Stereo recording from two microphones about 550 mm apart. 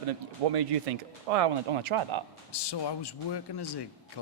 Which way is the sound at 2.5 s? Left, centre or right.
Left.